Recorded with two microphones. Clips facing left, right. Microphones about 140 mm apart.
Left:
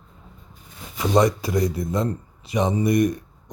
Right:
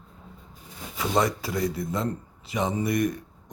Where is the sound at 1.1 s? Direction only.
15° left (ahead or behind).